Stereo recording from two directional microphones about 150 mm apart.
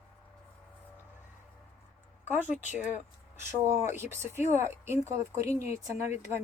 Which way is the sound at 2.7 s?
10° right (ahead or behind).